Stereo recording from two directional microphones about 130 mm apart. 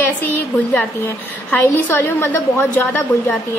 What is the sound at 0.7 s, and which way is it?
A woman's voice, 15° left (ahead or behind).